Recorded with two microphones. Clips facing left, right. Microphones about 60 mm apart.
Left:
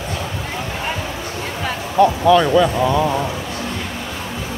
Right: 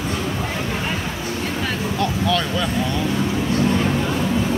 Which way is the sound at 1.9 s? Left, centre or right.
Centre.